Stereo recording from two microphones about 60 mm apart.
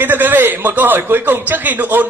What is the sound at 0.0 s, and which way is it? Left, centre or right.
A man's voice, right.